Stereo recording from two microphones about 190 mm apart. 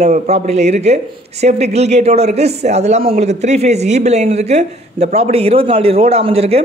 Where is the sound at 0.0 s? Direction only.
35° right (ahead or behind).